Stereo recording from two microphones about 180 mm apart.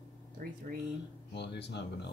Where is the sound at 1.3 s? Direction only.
70° left (ahead or behind).